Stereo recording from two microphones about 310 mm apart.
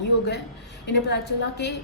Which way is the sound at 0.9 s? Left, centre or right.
Left.